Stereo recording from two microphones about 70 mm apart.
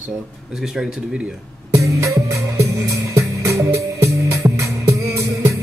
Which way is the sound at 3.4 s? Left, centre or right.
Right.